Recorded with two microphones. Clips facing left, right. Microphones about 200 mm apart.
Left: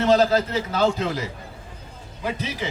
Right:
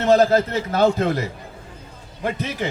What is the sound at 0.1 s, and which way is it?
A man's voice, 50° right (ahead or behind).